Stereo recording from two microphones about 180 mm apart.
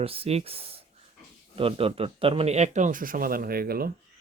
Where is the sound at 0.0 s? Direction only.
30° right (ahead or behind); by 3.9 s 55° right (ahead or behind).